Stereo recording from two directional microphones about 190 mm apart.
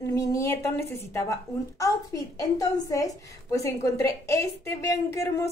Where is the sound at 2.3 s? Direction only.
20° left (ahead or behind).